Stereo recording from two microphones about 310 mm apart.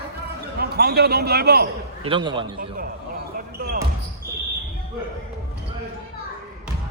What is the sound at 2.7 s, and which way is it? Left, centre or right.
Basketball bounce, right.